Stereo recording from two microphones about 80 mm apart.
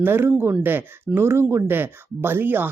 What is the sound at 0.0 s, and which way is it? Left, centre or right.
Speech, right.